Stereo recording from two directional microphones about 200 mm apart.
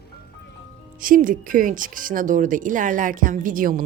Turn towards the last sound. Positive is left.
turn(degrees=-45)  # may be behind; listen again after turning